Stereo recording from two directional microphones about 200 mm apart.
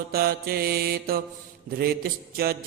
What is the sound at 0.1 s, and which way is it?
Mantra, 50° right (ahead or behind).